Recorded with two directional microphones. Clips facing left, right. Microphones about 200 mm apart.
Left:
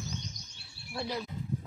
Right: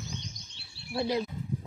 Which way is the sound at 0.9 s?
25° right (ahead or behind).